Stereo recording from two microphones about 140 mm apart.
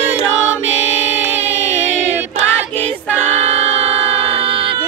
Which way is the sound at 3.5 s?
45° right (ahead or behind).